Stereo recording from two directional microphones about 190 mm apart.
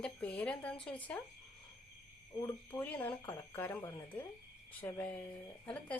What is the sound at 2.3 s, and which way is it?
Speech, 20° left (ahead or behind).